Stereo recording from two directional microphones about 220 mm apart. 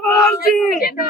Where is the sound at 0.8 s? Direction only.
45° left (ahead or behind).